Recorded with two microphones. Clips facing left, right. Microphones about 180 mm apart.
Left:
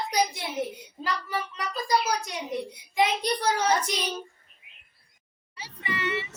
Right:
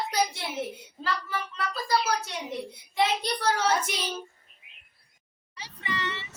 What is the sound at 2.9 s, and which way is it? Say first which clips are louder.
Speech: left 2 dB; 15° left (ahead or behind).